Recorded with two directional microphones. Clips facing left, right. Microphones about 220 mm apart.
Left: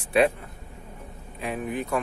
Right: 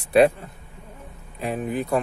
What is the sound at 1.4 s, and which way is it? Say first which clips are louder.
Speech: right 3 dB; 35° right (ahead or behind).